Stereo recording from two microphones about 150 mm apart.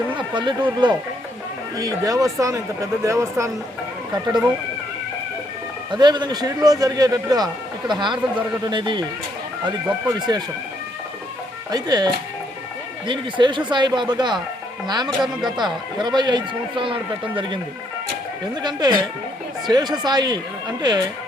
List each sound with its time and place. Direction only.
0.2 s a man's voice: 30° right (ahead or behind)
6.0 s a man's voice: 30° right (ahead or behind)
10.2 s a man's voice: 30° right (ahead or behind)
11.7 s a man's voice: 25° right (ahead or behind)
15.2 s speech: centre (ahead or behind)
15.5 s speech: 30° right (ahead or behind)
18.6 s a man's voice: 30° right (ahead or behind)